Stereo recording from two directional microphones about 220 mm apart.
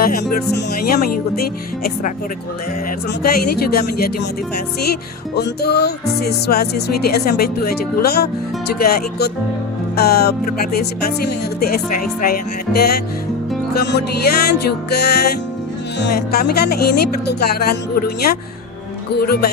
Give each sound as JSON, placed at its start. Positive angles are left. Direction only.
{"t": 0.0, "sound": "speech", "side_deg": 40}
{"t": 3.2, "sound": "speech", "side_deg": 45}